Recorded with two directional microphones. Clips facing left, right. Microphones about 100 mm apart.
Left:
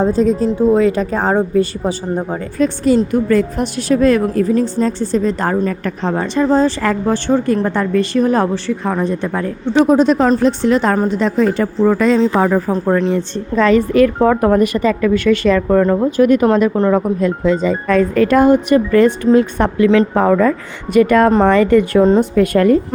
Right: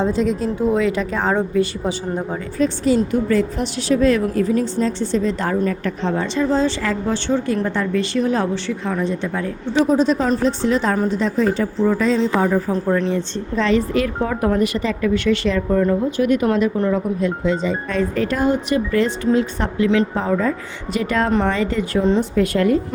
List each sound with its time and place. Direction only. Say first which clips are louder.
0.0 s speech: left 5 dB; 40° left (ahead or behind)
2.6 s a woman's voice: left 4 dB; 50° left (ahead or behind)
12.7 s speech: left 4 dB; 40° left (ahead or behind)
13.6 s a woman's voice: left 7 dB; 50° left (ahead or behind)
15.5 s a woman's voice: left 5 dB; 75° left (ahead or behind); by 22.0 s 60° left (ahead or behind)
22.0 s a woman's voice: left 5 dB; 50° left (ahead or behind)